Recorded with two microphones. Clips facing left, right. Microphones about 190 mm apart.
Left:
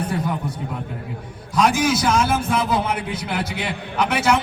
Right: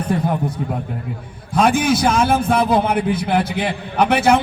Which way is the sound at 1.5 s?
55° right (ahead or behind).